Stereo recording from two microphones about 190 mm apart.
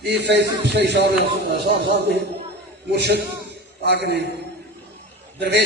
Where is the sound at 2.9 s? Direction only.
60° right (ahead or behind).